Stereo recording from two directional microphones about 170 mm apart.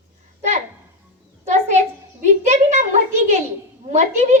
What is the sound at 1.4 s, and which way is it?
A child's voice, 40° right (ahead or behind).